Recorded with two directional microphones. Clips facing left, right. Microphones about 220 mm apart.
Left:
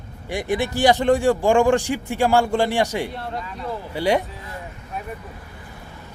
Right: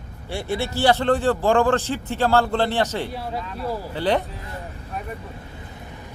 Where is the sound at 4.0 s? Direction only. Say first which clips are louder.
Left 2 dB; 10° left (ahead or behind).